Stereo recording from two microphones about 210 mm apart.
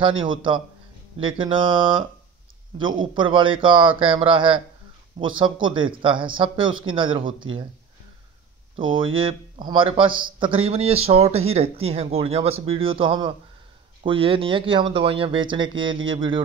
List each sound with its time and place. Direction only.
0.2 s speech: 25° right (ahead or behind)
8.7 s speech: 25° right (ahead or behind)